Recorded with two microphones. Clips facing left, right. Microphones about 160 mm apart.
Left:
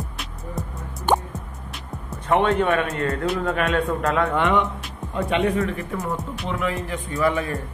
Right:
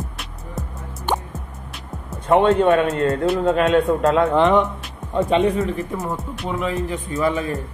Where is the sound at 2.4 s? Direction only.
25° right (ahead or behind).